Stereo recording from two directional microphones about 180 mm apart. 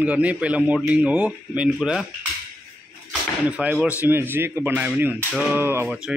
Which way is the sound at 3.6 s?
10° right (ahead or behind).